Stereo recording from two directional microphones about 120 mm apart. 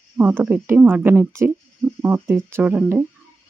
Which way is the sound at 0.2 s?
15° right (ahead or behind).